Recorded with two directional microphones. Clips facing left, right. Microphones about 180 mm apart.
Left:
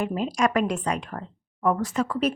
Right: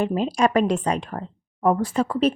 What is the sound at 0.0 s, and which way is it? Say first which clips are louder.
Speech: right 3 dB; 30° right (ahead or behind).